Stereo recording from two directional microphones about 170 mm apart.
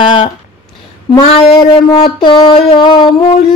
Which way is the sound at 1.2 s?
35° left (ahead or behind).